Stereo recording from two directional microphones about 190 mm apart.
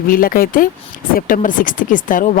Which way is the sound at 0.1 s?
50° left (ahead or behind).